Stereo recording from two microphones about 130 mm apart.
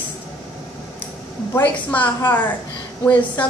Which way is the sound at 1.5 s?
15° left (ahead or behind).